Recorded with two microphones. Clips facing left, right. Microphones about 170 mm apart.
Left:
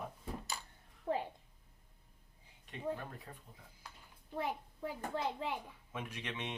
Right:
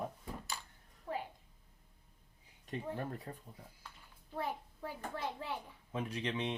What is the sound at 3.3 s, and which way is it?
Speech, 40° right (ahead or behind).